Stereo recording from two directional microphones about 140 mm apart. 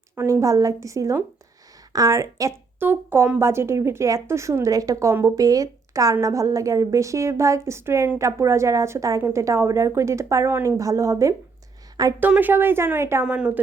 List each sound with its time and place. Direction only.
0.2 s a woman's voice: 20° right (ahead or behind)